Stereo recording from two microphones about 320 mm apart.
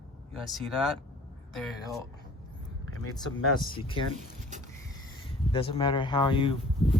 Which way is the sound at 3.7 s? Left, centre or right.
Centre.